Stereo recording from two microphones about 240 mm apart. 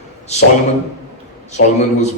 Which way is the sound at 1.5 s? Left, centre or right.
Left.